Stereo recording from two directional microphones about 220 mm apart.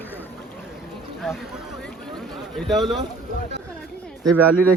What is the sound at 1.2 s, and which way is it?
Speech, centre (ahead or behind).